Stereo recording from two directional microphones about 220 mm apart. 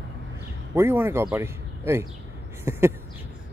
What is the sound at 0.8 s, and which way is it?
Speech, 10° right (ahead or behind).